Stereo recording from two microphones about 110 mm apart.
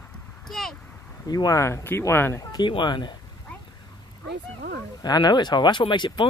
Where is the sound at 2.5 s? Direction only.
45° left (ahead or behind).